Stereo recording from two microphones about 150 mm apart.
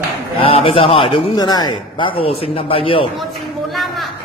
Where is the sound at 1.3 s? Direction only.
25° left (ahead or behind).